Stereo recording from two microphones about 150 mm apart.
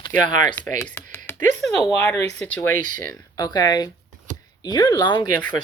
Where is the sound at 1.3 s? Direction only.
15° left (ahead or behind).